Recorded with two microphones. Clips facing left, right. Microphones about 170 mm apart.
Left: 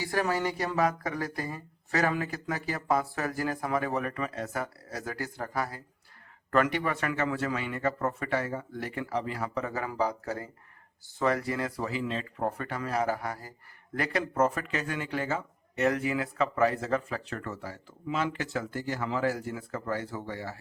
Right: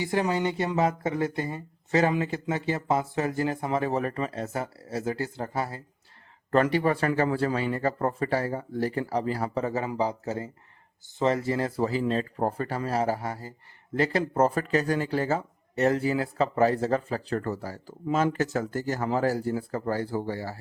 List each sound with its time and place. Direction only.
0.0 s speech: 20° right (ahead or behind); by 20.6 s 35° right (ahead or behind)